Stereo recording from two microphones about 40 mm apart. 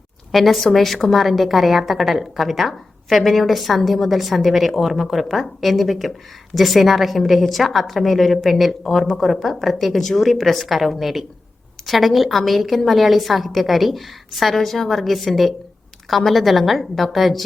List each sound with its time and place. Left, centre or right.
0.3 s a woman's voice: centre